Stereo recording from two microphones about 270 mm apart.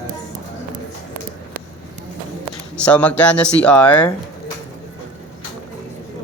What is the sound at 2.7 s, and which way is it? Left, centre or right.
Speech, centre.